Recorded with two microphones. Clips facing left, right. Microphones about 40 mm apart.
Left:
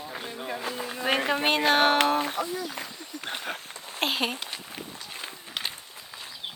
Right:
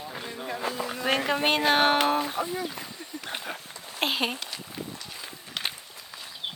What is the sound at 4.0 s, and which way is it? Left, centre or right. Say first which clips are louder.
Speech: even; centre.